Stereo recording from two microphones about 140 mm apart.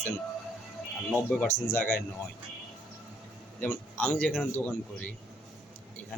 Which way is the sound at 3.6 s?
10° left (ahead or behind).